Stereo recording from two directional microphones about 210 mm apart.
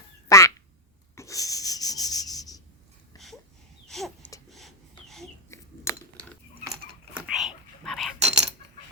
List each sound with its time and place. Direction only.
0.3 s quack: 15° left (ahead or behind)
1.1 s rub: 15° left (ahead or behind)
3.8 s a sound: centre (ahead or behind)
6.7 s cutlery: 5° right (ahead or behind)
8.2 s keys jangling: 30° right (ahead or behind)